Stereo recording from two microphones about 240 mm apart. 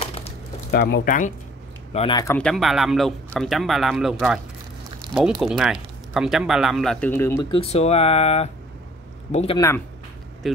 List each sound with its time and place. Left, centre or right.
0.7 s speech: left
2.0 s speech: centre
2.3 s speech: centre
7.5 s speech: left
10.4 s speech: centre